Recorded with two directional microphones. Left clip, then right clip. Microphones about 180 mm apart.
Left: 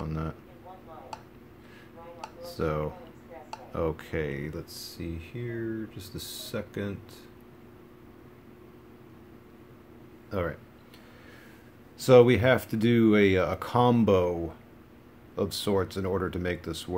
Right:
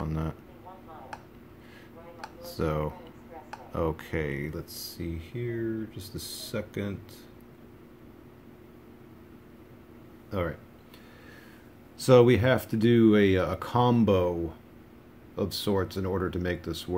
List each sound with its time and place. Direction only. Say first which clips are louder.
0.0 s a sound: right 1 dB; 10° right (ahead or behind)
2.4 s speech: even; 5° right (ahead or behind)
10.3 s speech: even; centre (ahead or behind)
12.0 s speech: left 1 dB; centre (ahead or behind)
15.3 s speech: left 1 dB; centre (ahead or behind)